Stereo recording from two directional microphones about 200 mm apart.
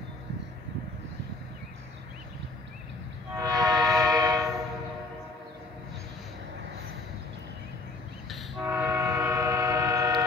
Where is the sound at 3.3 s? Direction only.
20° right (ahead or behind).